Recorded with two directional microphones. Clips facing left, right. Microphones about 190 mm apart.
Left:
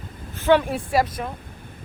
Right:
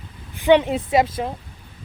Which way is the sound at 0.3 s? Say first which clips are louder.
Right 3 dB; 15° right (ahead or behind).